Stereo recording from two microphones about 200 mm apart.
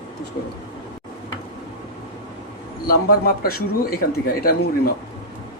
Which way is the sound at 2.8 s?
50° left (ahead or behind).